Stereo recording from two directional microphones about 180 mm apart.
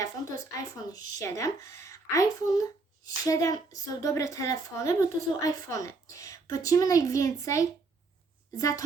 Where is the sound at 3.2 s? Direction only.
20° left (ahead or behind).